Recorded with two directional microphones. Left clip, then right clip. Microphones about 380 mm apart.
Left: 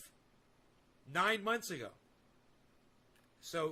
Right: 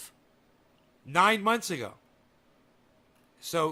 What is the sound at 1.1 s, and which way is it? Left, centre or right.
Speech, right.